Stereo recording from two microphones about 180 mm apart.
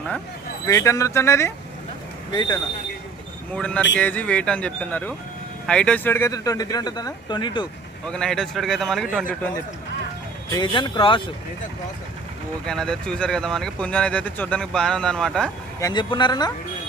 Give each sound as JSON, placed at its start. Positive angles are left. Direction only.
{"t": 0.7, "sound": "speech", "side_deg": 15}
{"t": 3.5, "sound": "speech", "side_deg": 5}
{"t": 8.0, "sound": "speech", "side_deg": 5}
{"t": 10.5, "sound": "speech", "side_deg": 25}
{"t": 12.6, "sound": "speech", "side_deg": 5}
{"t": 15.8, "sound": "speech", "side_deg": 25}